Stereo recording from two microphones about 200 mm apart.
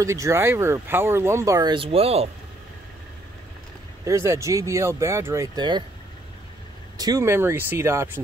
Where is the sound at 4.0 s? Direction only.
15° right (ahead or behind).